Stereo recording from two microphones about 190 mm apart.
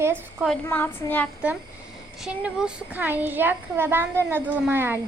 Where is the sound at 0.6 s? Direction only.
10° left (ahead or behind).